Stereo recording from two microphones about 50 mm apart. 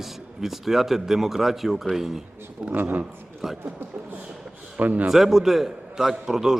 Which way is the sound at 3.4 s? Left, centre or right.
Centre.